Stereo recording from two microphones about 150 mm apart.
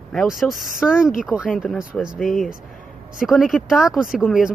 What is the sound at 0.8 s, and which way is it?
Speech, 5° right (ahead or behind).